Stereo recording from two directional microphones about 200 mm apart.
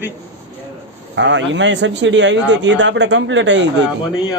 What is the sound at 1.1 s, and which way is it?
A man's voice, 65° right (ahead or behind).